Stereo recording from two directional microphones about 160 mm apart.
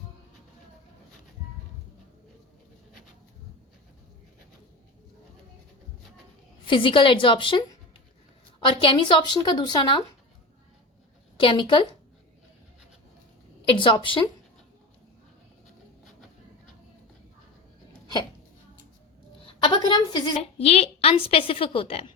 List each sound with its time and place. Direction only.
6.7 s a woman's voice: 30° left (ahead or behind)
11.3 s a woman's voice: 30° left (ahead or behind)
13.7 s a woman's voice: 30° left (ahead or behind)
19.5 s a woman's voice: 30° left (ahead or behind)